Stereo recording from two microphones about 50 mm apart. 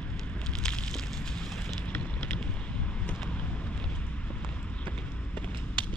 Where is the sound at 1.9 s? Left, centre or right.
Left.